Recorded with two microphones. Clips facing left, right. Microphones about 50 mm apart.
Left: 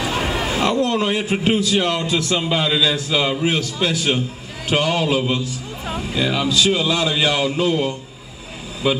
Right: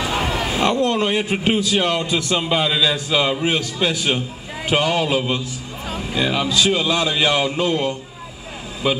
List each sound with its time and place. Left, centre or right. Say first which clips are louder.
0.0 s a sound: even; centre
0.7 s a man's voice: even; right
1.3 s a man's voice: left 1 dB; centre
8.8 s a man's voice: left 1 dB; centre